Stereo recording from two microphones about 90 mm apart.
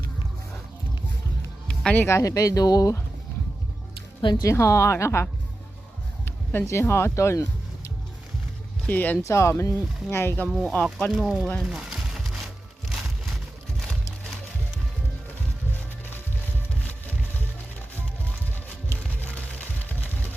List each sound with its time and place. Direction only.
1.6 s music: 10° left (ahead or behind)
2.0 s speech: 30° left (ahead or behind)
4.2 s speech: 60° left (ahead or behind)
4.4 s speech: 30° left (ahead or behind)
8.9 s speech: 20° left (ahead or behind)
9.2 s speech: 35° left (ahead or behind)
11.1 s speech: centre (ahead or behind)
11.6 s a sound: 10° right (ahead or behind)
18.5 s music: 20° left (ahead or behind)